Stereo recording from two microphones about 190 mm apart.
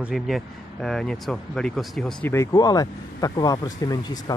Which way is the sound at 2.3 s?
15° left (ahead or behind).